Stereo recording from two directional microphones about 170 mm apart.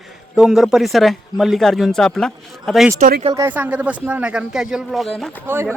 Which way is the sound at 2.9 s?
50° right (ahead or behind).